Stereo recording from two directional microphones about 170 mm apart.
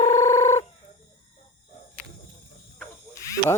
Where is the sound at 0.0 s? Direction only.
20° left (ahead or behind).